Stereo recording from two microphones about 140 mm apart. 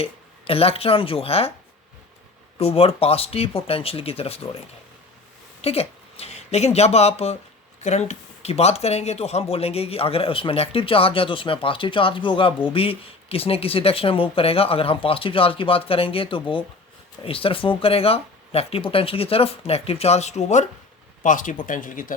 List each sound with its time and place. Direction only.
0.0 s speech: 45° left (ahead or behind)
2.6 s speech: 45° left (ahead or behind)
5.6 s speech: 45° left (ahead or behind)
21.2 s speech: 70° left (ahead or behind)